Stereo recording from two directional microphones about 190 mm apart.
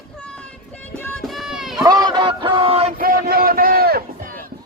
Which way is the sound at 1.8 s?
20° right (ahead or behind).